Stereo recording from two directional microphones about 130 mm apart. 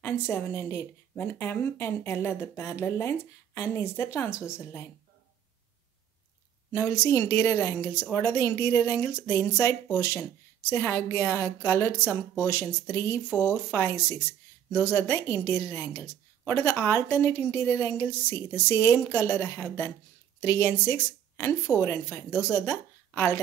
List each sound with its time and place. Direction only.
0.0 s a woman's voice: 20° left (ahead or behind)
6.7 s a woman's voice: 20° left (ahead or behind)